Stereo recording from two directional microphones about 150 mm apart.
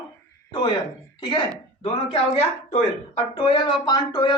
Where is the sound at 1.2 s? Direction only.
30° left (ahead or behind).